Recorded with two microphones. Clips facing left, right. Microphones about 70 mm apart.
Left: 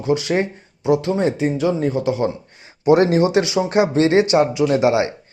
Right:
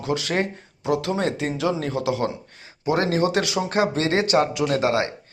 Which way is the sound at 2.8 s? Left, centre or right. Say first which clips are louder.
Left 7 dB; left.